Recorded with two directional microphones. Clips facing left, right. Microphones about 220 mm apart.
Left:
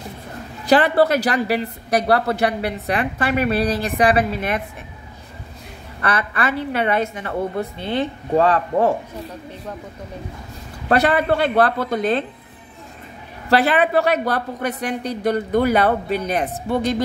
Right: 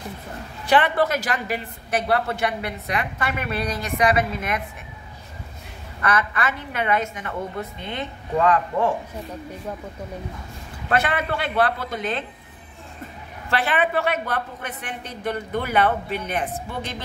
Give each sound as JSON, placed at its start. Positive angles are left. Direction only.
{"t": 0.7, "sound": "a woman's voice", "side_deg": 35}
{"t": 6.0, "sound": "a woman's voice", "side_deg": 30}
{"t": 10.9, "sound": "a woman's voice", "side_deg": 35}
{"t": 13.5, "sound": "a woman's voice", "side_deg": 35}